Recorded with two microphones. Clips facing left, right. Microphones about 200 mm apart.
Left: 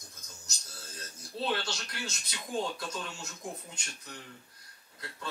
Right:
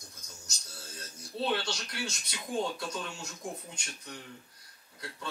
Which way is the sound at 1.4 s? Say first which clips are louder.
Right 1 dB; centre (ahead or behind).